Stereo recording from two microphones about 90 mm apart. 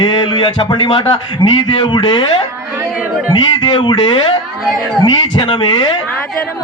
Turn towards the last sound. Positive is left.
turn(degrees=55)  # may be behind; listen again after turning